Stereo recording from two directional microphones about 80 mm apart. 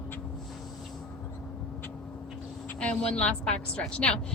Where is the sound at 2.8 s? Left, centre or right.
Centre.